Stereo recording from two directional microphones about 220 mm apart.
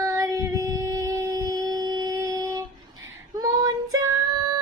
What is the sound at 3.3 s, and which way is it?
Female singing, 15° right (ahead or behind).